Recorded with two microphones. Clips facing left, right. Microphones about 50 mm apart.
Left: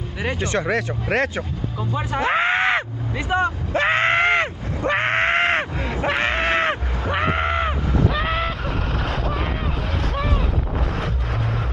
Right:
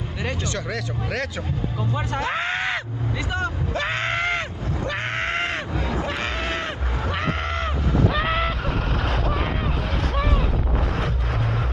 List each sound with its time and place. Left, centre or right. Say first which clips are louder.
0.2 s speech: left 4 dB; centre
0.5 s speech: left 6 dB; left
2.1 s groan: left 7 dB; left
3.3 s a sound: left 9 dB; left
7.1 s a sound: left 6 dB; left
8.1 s vehicle: even; centre